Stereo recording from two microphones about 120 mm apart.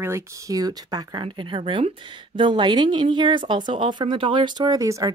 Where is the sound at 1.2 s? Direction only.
45° right (ahead or behind).